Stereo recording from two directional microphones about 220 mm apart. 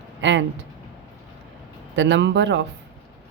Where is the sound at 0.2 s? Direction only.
55° right (ahead or behind).